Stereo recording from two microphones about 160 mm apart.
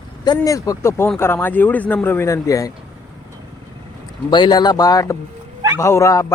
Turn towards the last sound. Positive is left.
turn(degrees=20)  # may be behind; listen again after turning